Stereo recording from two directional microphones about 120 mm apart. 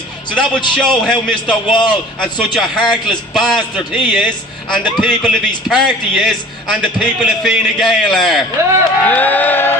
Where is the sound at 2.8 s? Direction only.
40° left (ahead or behind).